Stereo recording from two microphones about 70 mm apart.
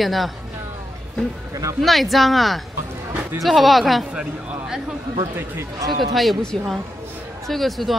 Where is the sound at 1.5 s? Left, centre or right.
Right.